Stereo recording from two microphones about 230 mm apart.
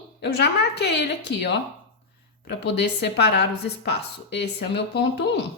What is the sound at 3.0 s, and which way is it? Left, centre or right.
Speech, left.